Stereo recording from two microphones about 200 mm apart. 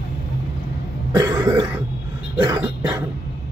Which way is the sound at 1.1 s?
15° right (ahead or behind).